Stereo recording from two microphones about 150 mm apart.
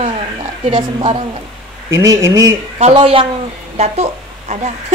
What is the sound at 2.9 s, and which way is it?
A woman's voice, 35° right (ahead or behind).